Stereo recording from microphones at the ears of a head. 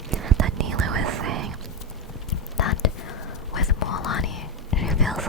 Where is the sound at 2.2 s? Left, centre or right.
Left.